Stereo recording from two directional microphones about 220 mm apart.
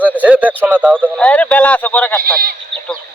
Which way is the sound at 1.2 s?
5° left (ahead or behind).